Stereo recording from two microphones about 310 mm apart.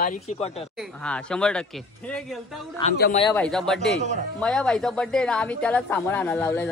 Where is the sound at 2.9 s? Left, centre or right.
Left.